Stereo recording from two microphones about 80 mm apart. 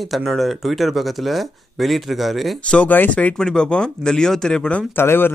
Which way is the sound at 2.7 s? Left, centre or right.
Left.